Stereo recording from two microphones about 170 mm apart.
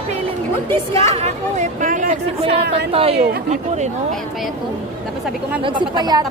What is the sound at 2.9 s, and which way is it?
Speech, 35° right (ahead or behind).